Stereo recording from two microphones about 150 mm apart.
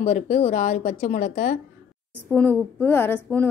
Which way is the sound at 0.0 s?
45° left (ahead or behind).